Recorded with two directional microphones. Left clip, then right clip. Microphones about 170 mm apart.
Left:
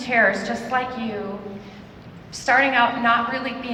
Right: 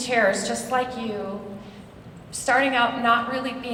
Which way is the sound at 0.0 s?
20° right (ahead or behind).